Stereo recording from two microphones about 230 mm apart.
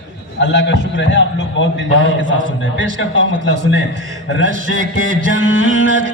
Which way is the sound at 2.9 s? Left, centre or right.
Left.